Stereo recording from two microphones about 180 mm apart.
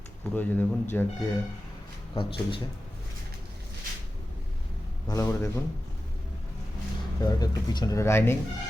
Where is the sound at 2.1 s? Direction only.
30° left (ahead or behind).